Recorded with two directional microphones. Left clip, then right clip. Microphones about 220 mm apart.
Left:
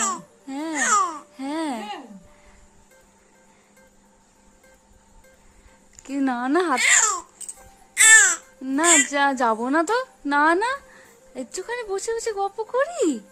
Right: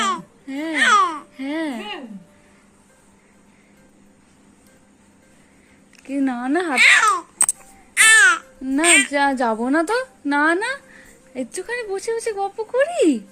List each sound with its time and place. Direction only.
0.4 s babbling: 35° left (ahead or behind)
0.7 s babbling: 15° left (ahead or behind)
1.4 s a sound: 30° left (ahead or behind)
6.1 s a woman's voice: 25° left (ahead or behind)
6.7 s a child's voice: 15° left (ahead or behind)
7.9 s babbling: 15° left (ahead or behind)
8.8 s a woman's voice: 20° left (ahead or behind)